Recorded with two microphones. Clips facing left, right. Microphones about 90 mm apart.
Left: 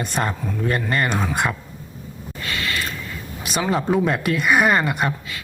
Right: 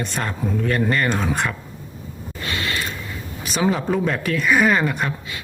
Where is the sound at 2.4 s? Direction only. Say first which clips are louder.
Even; 25° right (ahead or behind).